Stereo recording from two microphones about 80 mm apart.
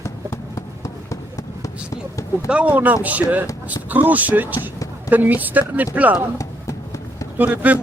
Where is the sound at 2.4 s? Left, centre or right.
Centre.